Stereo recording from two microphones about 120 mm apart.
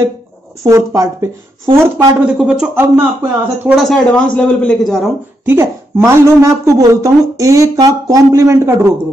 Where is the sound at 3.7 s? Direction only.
Centre (ahead or behind).